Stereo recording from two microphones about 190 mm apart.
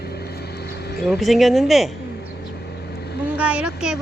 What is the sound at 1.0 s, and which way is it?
Speech, centre (ahead or behind).